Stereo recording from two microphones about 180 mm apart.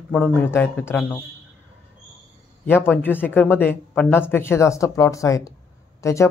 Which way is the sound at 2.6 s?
10° left (ahead or behind).